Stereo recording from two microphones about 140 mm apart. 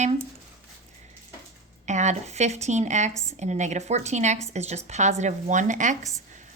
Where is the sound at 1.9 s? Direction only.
55° right (ahead or behind).